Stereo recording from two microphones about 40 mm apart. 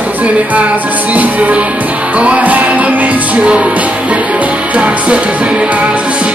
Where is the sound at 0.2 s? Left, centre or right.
Right.